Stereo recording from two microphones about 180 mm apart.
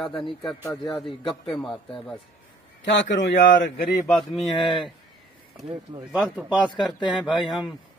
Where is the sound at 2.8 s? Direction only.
90° left.